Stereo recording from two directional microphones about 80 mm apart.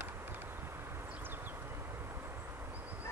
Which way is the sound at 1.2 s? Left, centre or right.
Right.